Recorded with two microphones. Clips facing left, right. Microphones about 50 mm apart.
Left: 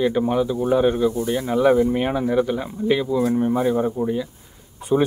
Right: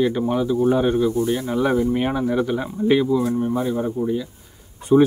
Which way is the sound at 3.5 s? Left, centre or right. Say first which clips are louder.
Left 2 dB; centre.